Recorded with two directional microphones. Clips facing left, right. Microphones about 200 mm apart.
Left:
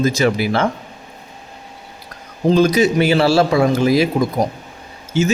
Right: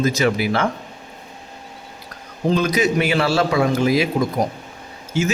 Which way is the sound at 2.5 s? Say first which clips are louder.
Left 5 dB; 30° left (ahead or behind).